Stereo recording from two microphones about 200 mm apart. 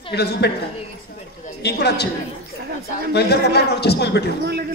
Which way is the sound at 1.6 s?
55° left (ahead or behind).